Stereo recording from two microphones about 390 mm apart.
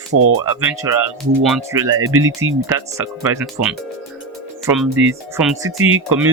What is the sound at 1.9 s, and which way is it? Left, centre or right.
Speech, right.